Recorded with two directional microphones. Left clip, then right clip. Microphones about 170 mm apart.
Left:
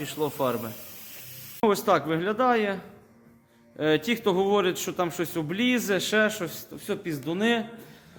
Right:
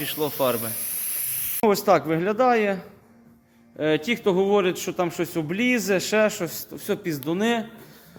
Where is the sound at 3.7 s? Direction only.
10° right (ahead or behind).